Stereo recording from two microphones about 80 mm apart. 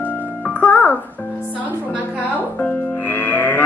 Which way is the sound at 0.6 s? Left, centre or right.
Centre.